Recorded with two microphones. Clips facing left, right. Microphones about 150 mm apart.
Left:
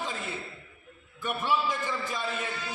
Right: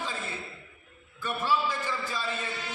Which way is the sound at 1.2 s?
15° left (ahead or behind).